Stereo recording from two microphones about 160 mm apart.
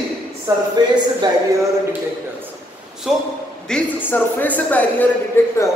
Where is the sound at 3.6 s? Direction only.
10° left (ahead or behind).